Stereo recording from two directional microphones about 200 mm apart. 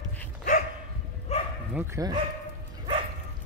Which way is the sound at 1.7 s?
15° right (ahead or behind).